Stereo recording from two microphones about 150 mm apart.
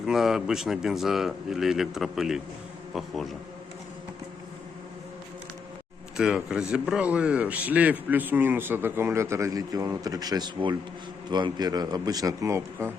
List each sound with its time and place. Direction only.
0.1 s a man's voice: 5° right (ahead or behind)
6.1 s a man's voice: 5° right (ahead or behind)